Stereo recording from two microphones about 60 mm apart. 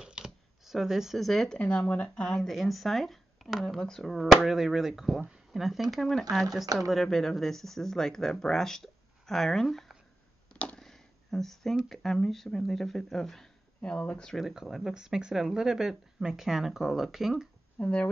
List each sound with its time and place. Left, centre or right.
0.0 s shuffling cards: centre
1.6 s speech: centre
2.2 s speech: centre
3.6 s speech: centre
10.5 s a sound: left
10.8 s a sound: centre
11.9 s speech: centre
13.7 s speech: centre
14.3 s speech: centre
17.7 s speech: left